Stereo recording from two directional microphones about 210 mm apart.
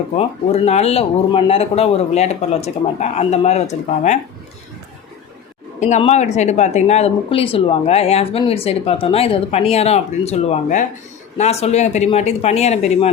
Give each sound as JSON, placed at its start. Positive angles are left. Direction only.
{"t": 0.2, "sound": "speech", "side_deg": 30}
{"t": 5.8, "sound": "speech", "side_deg": 30}